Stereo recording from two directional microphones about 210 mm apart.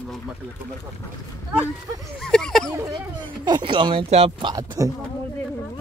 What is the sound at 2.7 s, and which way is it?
Speech, 20° right (ahead or behind).